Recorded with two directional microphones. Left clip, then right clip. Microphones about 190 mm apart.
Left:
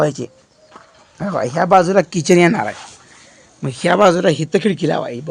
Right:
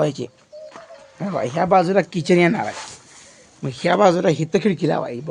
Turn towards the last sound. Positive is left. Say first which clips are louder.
# left 2 dB
turn(degrees=30)  # may be behind; listen again after turning